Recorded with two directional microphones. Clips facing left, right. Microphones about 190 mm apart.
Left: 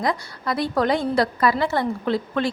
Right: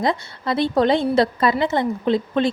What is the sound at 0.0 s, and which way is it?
A woman's voice, 25° right (ahead or behind).